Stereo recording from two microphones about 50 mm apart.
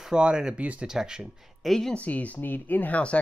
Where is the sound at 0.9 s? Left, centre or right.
Centre.